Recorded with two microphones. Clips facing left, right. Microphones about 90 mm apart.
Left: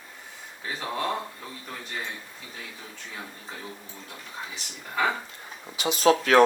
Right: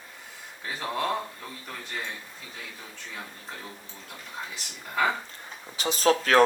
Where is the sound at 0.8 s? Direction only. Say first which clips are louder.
Right 1 dB; 5° left (ahead or behind).